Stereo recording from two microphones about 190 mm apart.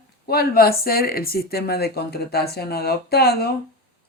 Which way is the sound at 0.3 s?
55° left (ahead or behind).